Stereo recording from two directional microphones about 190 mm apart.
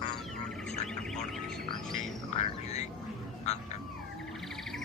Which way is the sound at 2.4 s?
35° left (ahead or behind).